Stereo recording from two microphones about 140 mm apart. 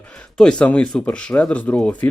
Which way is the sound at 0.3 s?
10° left (ahead or behind).